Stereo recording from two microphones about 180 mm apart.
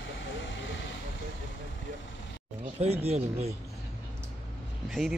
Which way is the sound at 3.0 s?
35° right (ahead or behind).